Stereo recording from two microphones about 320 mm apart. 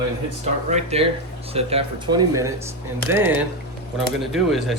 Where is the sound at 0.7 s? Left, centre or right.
Centre.